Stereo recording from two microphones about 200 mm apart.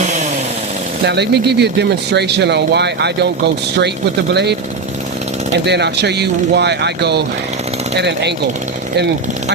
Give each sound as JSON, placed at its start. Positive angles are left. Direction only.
{"t": 1.0, "sound": "speech", "side_deg": -55}
{"t": 5.6, "sound": "speech", "side_deg": -55}